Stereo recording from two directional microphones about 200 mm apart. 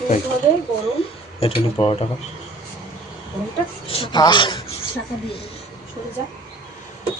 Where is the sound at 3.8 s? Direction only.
25° left (ahead or behind).